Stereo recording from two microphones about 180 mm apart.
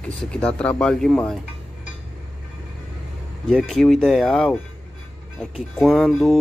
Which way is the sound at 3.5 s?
Centre (ahead or behind).